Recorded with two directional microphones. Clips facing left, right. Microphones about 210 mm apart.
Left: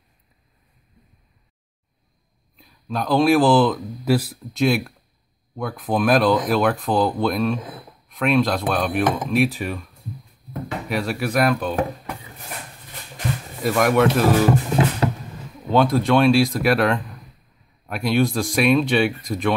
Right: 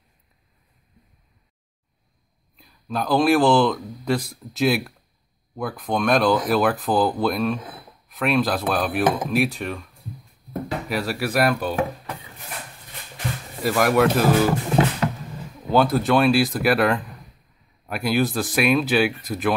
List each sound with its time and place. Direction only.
2.5 s speech: centre (ahead or behind)
10.9 s speech: centre (ahead or behind)
13.6 s speech: centre (ahead or behind)
15.0 s roaring cats: 30° left (ahead or behind)
15.7 s speech: 5° right (ahead or behind)